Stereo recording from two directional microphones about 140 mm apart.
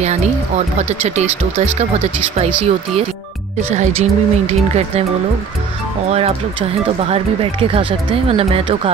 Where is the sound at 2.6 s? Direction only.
50° right (ahead or behind).